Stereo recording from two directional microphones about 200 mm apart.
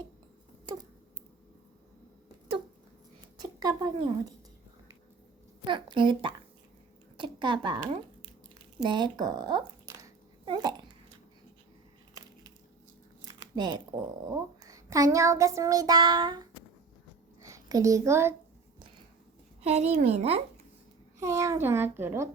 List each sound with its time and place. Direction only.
0.6 s a sound: 20° right (ahead or behind)
3.4 s speech: 20° right (ahead or behind)
5.6 s a woman's voice: 25° right (ahead or behind)
8.8 s a sound: 20° right (ahead or behind)
13.2 s a woman's voice: 20° right (ahead or behind)
19.6 s speech: 35° right (ahead or behind)
21.2 s a child's voice: 15° right (ahead or behind)